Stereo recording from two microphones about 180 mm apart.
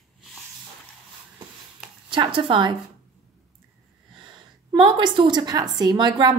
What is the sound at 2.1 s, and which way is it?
Speech, 30° right (ahead or behind).